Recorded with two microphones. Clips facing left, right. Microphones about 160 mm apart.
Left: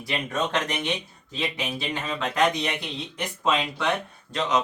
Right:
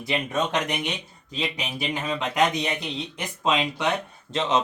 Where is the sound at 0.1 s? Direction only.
15° right (ahead or behind).